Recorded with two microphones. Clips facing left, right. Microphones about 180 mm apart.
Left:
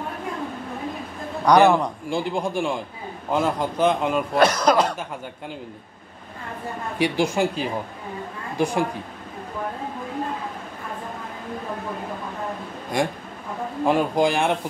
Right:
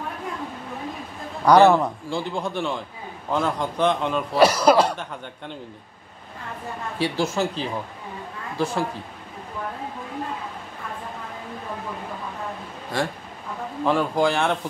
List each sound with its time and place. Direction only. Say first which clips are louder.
1.5 s a man's voice: right 1 dB; 15° left (ahead or behind)
4.3 s speech: right 3 dB; 5° right (ahead or behind)
7.0 s a man's voice: left 3 dB; 15° left (ahead or behind)
12.9 s a man's voice: left 3 dB; 15° left (ahead or behind)